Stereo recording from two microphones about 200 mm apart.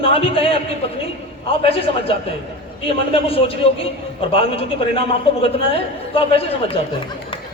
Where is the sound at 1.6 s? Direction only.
30° left (ahead or behind).